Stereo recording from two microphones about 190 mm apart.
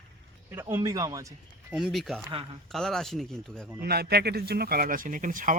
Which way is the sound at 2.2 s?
25° right (ahead or behind).